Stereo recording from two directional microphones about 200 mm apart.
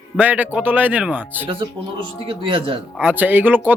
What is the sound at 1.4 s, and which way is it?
Speech, 25° right (ahead or behind).